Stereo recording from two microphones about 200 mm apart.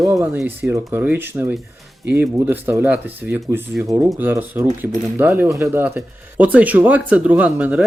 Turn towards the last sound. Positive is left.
turn(degrees=-5)  # may be behind; listen again after turning